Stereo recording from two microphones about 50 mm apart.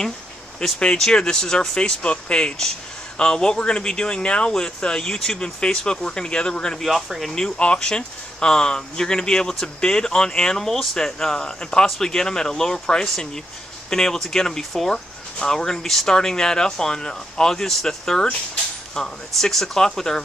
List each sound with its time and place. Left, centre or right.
0.7 s speech: left
1.8 s speech: left
6.8 s speech: centre
7.3 s speech: centre